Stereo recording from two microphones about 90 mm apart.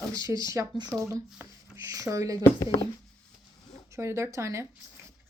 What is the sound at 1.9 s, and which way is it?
Speech, 40° right (ahead or behind).